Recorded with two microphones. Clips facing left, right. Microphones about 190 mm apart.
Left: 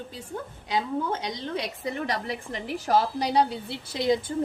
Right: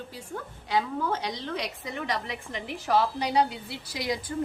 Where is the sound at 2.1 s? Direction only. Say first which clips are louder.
Left 2 dB; 40° left (ahead or behind).